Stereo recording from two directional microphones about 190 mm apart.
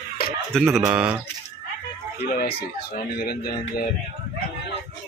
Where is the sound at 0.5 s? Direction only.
Centre (ahead or behind).